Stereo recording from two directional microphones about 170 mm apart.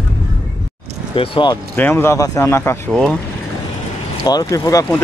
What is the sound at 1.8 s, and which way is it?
Speech, 10° left (ahead or behind).